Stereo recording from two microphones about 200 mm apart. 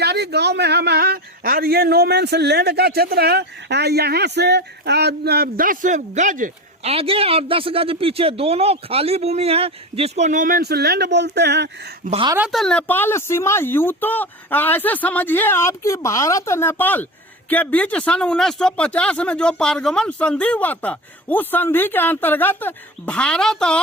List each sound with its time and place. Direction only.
0.0 s a man's voice: 55° right (ahead or behind)
6.9 s speech: 30° right (ahead or behind); by 11.9 s 55° right (ahead or behind)
12.0 s speech: 30° right (ahead or behind)
12.5 s speech: 5° left (ahead or behind)